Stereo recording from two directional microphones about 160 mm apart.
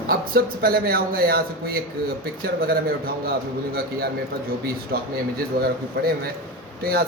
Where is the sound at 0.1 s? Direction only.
70° right (ahead or behind).